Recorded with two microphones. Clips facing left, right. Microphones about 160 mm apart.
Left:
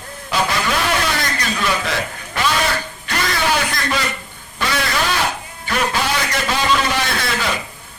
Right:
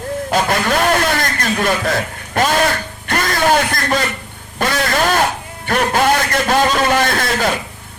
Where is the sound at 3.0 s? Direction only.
50° right (ahead or behind).